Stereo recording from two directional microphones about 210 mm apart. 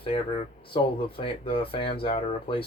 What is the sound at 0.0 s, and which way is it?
Speech, 25° left (ahead or behind).